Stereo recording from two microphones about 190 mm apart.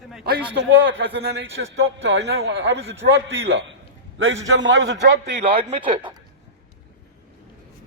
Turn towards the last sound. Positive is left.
turn(degrees=-25)  # may be behind; listen again after turning